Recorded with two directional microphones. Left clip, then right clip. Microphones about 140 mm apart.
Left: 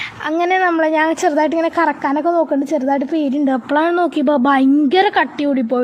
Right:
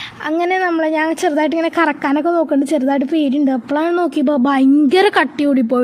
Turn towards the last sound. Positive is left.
turn(degrees=-30)  # may be behind; listen again after turning